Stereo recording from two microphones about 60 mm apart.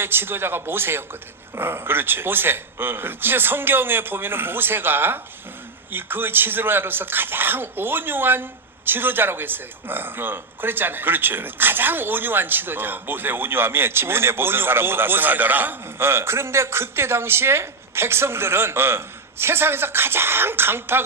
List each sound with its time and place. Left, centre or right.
0.0 s speech: right